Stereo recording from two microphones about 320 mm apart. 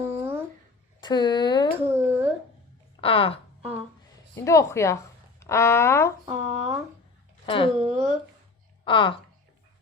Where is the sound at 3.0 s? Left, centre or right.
Centre.